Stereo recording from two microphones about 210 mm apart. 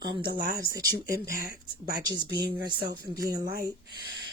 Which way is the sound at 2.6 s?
20° right (ahead or behind).